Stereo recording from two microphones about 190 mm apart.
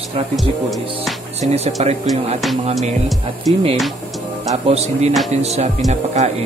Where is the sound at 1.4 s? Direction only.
35° right (ahead or behind).